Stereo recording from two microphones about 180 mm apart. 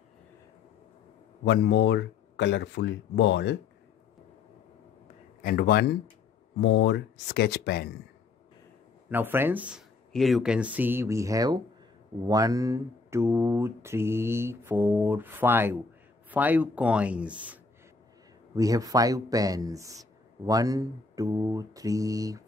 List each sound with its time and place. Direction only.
1.4 s speech: 75° left (ahead or behind)
5.4 s speech: 55° left (ahead or behind)
6.6 s speech: 75° left (ahead or behind)
9.1 s speech: 10° right (ahead or behind)
18.5 s mantra: 20° right (ahead or behind)